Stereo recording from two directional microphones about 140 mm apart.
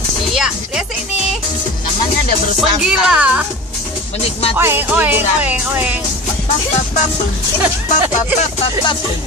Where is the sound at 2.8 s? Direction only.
5° right (ahead or behind).